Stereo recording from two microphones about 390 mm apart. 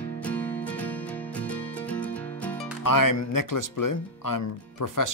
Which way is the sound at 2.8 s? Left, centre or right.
Left.